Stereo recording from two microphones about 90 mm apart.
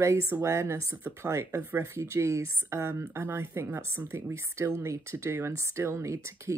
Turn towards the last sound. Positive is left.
turn(degrees=-35)  # may be behind; listen again after turning